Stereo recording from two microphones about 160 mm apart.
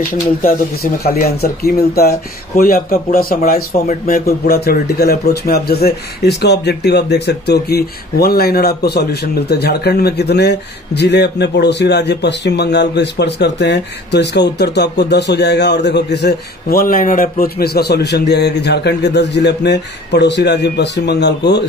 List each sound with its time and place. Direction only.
1.0 s speech: 70° left (ahead or behind); by 21.6 s 90° left